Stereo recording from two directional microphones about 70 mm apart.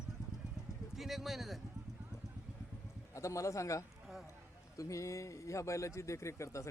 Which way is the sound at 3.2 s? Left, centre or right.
Left.